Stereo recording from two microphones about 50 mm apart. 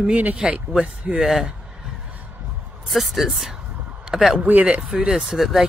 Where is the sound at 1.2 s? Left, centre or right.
Centre.